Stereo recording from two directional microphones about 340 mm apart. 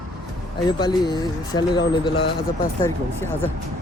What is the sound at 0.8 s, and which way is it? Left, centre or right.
Speech, centre.